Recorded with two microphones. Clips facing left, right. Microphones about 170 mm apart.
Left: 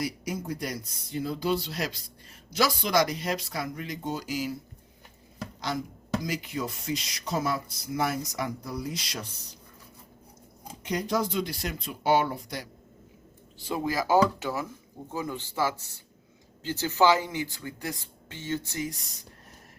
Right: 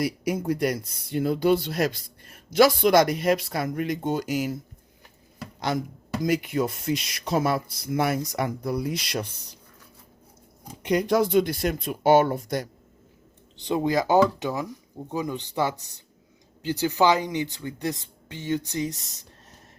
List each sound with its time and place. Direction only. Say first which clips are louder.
0.0 s speech: right 6 dB; 60° right (ahead or behind)
5.5 s speech: right 6 dB; 55° right (ahead or behind)
10.8 s speech: right 7 dB; 60° right (ahead or behind)
13.7 s speech: right 4 dB; 20° right (ahead or behind)